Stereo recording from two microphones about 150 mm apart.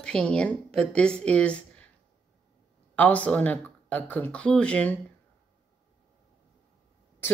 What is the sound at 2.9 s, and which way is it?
Speech, 10° left (ahead or behind).